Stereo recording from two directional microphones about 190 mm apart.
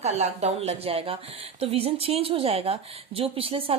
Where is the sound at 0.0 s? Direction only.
35° right (ahead or behind).